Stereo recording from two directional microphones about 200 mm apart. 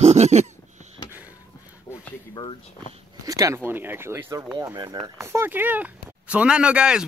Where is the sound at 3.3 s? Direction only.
15° right (ahead or behind).